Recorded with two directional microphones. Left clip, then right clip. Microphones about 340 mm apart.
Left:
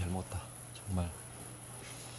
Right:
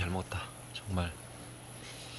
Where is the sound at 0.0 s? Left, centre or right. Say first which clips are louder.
Right 5 dB; centre.